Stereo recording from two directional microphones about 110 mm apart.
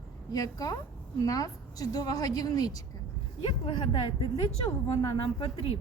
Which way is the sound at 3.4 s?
50° left (ahead or behind).